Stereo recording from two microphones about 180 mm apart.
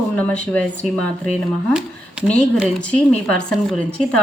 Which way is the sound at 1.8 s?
5° right (ahead or behind).